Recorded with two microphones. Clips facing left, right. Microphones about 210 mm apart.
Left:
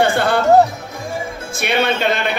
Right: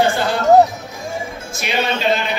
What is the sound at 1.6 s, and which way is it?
Speech, 60° left (ahead or behind).